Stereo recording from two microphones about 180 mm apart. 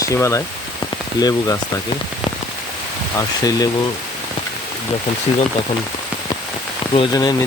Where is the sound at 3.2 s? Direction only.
20° left (ahead or behind).